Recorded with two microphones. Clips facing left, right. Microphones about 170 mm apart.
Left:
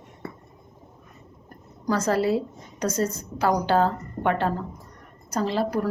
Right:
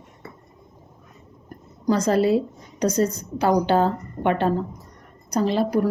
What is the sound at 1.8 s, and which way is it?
A woman's voice, 20° right (ahead or behind).